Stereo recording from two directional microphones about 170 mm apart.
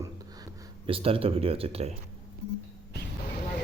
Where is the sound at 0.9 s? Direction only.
35° right (ahead or behind).